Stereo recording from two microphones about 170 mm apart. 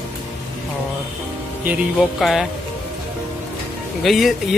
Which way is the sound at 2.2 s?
Centre (ahead or behind).